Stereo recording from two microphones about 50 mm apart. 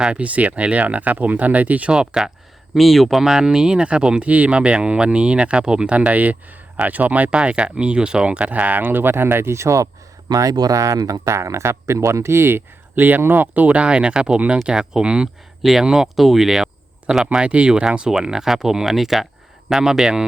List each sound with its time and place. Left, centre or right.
0.0 s speech: right
1.9 s speech: centre
2.7 s speech: centre
3.2 s speech: centre; by 7.3 s right
7.3 s speech: right
10.8 s speech: right; by 15.3 s centre
15.6 s speech: centre
17.3 s speech: right